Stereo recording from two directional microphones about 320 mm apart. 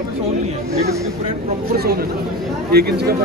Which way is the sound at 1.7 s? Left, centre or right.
Right.